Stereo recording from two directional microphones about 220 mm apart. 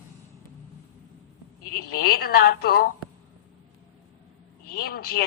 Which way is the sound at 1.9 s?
45° left (ahead or behind).